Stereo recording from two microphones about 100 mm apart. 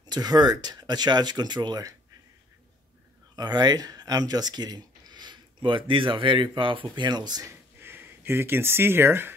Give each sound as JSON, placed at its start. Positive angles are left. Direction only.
{"t": 0.0, "sound": "speech", "side_deg": -40}
{"t": 3.3, "sound": "speech", "side_deg": -45}
{"t": 7.8, "sound": "speech", "side_deg": -20}